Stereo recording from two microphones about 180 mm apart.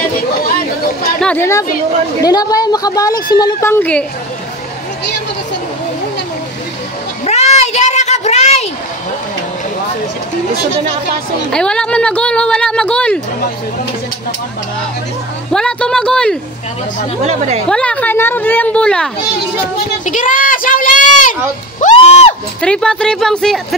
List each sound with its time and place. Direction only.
1.2 s a woman's voice: 10° left (ahead or behind)
7.2 s a sound: 35° left (ahead or behind)
11.5 s speech: 5° left (ahead or behind)
15.5 s speech: 5° left (ahead or behind)
17.3 s a woman's voice: 35° right (ahead or behind)
17.6 s a woman's voice: 5° left (ahead or behind)
20.1 s speech: 45° left (ahead or behind)
22.6 s speech: 5° left (ahead or behind)